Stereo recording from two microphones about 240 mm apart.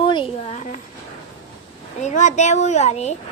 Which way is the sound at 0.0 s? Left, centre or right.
Centre.